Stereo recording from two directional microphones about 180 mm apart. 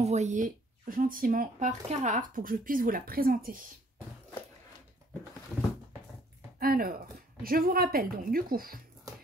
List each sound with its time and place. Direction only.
0.0 s speech: 40° right (ahead or behind)
6.6 s speech: 55° right (ahead or behind)